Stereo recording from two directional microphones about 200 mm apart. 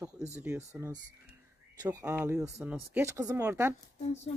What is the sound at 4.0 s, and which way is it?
Speech, 35° left (ahead or behind).